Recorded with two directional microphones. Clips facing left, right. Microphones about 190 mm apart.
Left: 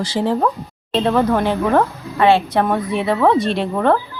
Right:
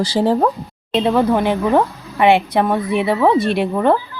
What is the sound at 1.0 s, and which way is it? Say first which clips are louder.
Speech: right 1 dB; 10° right (ahead or behind).